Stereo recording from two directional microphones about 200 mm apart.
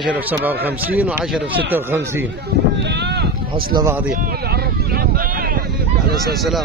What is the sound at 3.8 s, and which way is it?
Speech, 15° right (ahead or behind).